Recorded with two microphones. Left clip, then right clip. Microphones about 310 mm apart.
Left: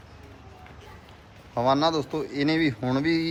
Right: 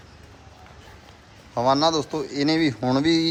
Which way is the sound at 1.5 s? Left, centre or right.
Centre.